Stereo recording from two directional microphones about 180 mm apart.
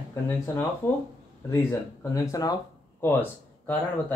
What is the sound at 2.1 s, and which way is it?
Speech, 20° left (ahead or behind).